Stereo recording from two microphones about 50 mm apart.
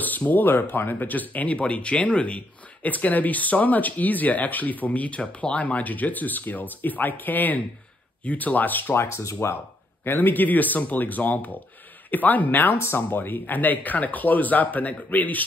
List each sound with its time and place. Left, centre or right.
0.3 s speech: left
8.9 s speech: left
9.2 s speech: left
10.0 s speech: left
12.7 s speech: left
13.1 s speech: left